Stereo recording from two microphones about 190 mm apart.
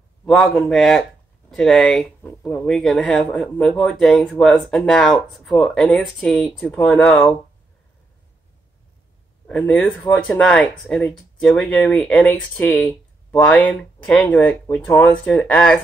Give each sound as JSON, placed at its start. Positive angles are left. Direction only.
{"t": 0.2, "sound": "speech", "side_deg": 0}
{"t": 9.5, "sound": "speech", "side_deg": 5}